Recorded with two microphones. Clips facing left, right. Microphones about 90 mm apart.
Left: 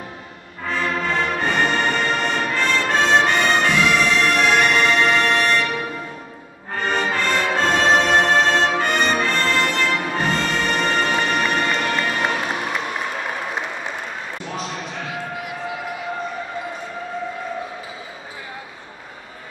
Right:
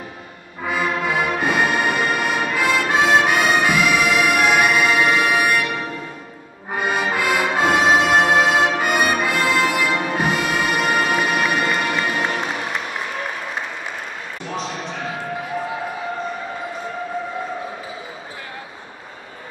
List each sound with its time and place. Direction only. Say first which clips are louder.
0.7 s music: right 1 dB; 10° right (ahead or behind)
6.7 s music: right 1 dB; 10° right (ahead or behind)